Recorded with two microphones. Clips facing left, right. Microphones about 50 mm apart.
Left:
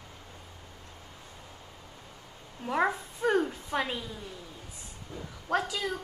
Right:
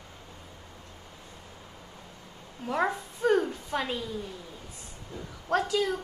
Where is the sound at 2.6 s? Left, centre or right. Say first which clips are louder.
Even; centre.